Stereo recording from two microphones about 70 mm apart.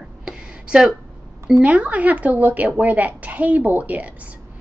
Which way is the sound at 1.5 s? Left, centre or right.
Centre.